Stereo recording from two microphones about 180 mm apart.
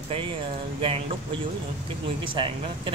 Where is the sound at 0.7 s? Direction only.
30° right (ahead or behind).